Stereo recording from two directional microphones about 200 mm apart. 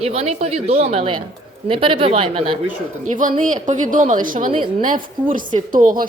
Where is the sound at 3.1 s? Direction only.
40° right (ahead or behind).